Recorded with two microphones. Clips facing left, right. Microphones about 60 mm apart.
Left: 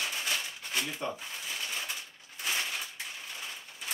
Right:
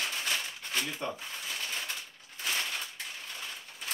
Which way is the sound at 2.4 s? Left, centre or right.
Centre.